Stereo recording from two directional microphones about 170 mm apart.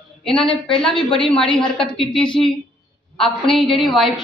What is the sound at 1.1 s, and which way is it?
Speech, 30° left (ahead or behind).